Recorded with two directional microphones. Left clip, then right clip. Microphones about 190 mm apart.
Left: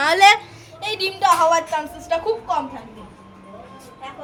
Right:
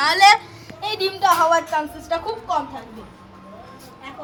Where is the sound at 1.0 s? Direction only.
60° left (ahead or behind).